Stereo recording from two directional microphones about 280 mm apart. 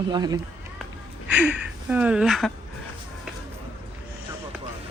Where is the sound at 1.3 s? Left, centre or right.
Centre.